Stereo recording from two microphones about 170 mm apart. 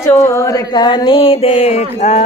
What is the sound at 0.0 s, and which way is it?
Speech, 20° left (ahead or behind).